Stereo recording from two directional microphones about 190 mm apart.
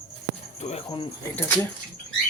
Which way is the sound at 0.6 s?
35° left (ahead or behind).